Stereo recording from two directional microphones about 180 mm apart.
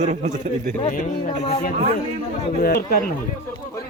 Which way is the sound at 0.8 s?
40° left (ahead or behind).